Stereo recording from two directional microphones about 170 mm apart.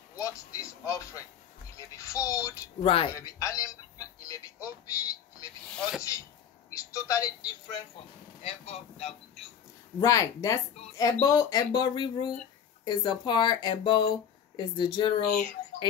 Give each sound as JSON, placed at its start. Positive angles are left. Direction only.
{"t": 0.1, "sound": "speech", "side_deg": 20}
{"t": 2.8, "sound": "speech", "side_deg": 35}
{"t": 3.1, "sound": "speech", "side_deg": 20}
{"t": 5.7, "sound": "speech", "side_deg": 0}
{"t": 6.7, "sound": "speech", "side_deg": 20}
{"t": 8.4, "sound": "speech", "side_deg": 35}
{"t": 9.9, "sound": "speech", "side_deg": 20}